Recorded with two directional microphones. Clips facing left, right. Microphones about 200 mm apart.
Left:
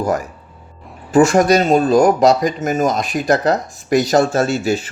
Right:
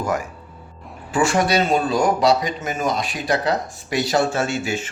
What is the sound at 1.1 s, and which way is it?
Speech, 40° left (ahead or behind).